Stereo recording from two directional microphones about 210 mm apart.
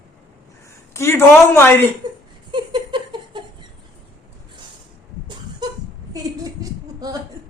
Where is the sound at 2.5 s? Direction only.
20° right (ahead or behind).